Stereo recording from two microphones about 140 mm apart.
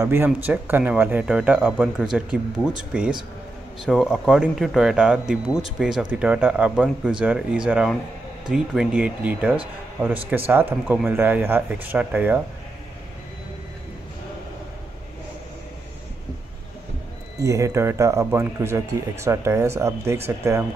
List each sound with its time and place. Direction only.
0.0 s speech: 15° right (ahead or behind)
17.4 s speech: 25° right (ahead or behind)